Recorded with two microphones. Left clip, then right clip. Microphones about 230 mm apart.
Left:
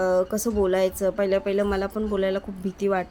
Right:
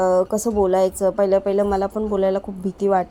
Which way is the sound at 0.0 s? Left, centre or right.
Centre.